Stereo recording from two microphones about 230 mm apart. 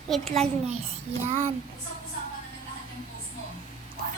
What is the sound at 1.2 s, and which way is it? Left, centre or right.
Child singing, right.